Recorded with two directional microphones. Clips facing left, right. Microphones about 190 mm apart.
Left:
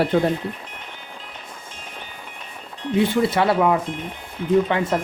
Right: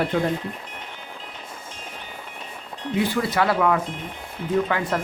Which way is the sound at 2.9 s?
25° left (ahead or behind).